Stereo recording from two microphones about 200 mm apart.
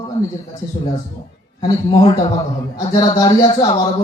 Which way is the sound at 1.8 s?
25° left (ahead or behind).